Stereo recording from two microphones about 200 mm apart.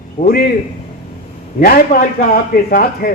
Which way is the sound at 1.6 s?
45° left (ahead or behind).